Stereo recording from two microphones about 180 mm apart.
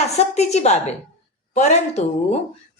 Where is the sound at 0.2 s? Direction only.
35° left (ahead or behind).